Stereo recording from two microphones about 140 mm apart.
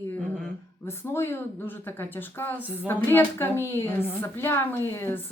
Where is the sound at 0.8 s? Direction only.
20° left (ahead or behind).